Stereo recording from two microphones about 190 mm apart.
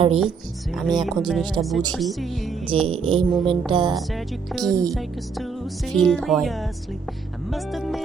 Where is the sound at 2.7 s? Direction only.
30° right (ahead or behind).